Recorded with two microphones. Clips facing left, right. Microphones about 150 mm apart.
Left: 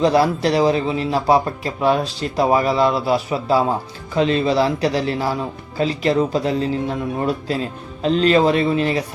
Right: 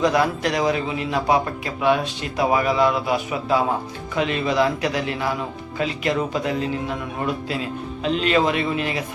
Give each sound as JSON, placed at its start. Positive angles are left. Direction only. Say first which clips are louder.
{"t": 0.0, "sound": "speech", "louder": "left 4 dB", "side_deg": 30}